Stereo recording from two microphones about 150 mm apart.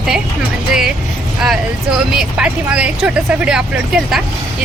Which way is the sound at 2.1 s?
5° right (ahead or behind).